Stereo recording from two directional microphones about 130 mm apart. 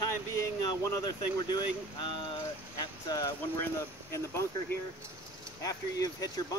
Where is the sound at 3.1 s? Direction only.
25° left (ahead or behind).